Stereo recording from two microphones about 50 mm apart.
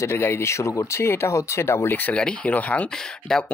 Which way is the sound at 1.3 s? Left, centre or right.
Left.